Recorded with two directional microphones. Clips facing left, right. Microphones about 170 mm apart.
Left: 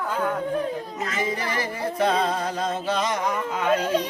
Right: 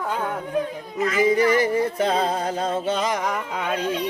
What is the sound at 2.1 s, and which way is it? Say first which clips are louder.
Music: right 1 dB; 30° right (ahead or behind).